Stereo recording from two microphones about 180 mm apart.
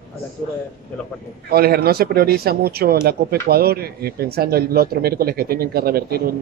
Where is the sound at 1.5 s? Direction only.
60° right (ahead or behind).